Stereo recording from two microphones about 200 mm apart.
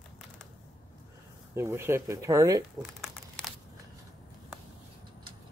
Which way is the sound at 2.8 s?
Centre (ahead or behind).